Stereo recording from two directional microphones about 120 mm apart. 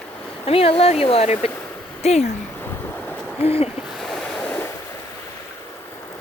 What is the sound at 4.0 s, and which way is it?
Waves, 5° left (ahead or behind).